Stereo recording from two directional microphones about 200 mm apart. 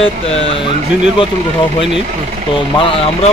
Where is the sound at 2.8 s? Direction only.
25° left (ahead or behind).